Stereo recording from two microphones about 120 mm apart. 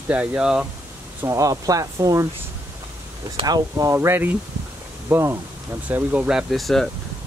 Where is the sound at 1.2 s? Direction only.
25° right (ahead or behind).